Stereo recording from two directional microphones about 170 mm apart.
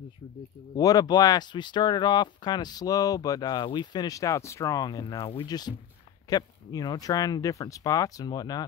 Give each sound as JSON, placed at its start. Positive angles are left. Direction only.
{"t": 0.7, "sound": "speech", "side_deg": 20}